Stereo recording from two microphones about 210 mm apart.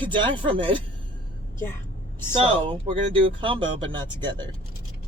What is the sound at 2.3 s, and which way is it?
Speech, 25° right (ahead or behind).